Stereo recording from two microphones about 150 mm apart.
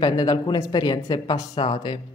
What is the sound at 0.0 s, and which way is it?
Speech, 25° left (ahead or behind).